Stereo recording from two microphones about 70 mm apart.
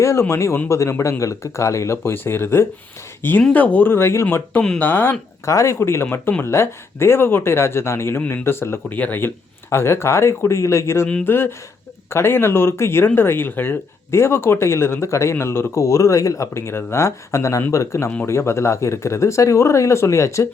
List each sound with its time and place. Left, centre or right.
0.0 s speech: left
3.5 s speech: left
5.5 s speech: left
8.9 s speech: left
12.1 s speech: left